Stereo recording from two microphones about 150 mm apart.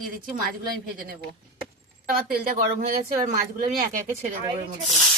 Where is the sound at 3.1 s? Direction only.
65° right (ahead or behind).